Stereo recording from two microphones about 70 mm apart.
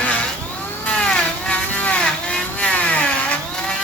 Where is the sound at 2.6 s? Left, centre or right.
Centre.